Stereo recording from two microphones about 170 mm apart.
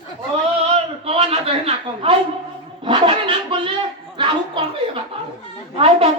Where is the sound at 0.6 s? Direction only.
35° right (ahead or behind).